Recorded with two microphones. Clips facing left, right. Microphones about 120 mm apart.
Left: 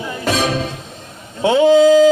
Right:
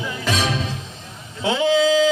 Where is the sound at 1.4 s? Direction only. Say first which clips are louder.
Left 8 dB; 50° left (ahead or behind).